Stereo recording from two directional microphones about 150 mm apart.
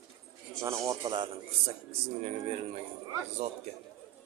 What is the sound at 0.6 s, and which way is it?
Speech, 20° right (ahead or behind).